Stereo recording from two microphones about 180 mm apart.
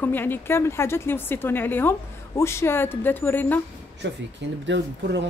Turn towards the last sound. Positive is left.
turn(degrees=-75)  # may be behind; listen again after turning